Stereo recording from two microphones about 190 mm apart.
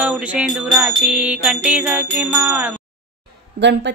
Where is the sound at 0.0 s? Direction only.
5° right (ahead or behind).